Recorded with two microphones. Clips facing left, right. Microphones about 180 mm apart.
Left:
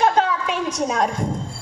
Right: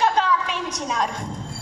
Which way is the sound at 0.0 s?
50° left (ahead or behind).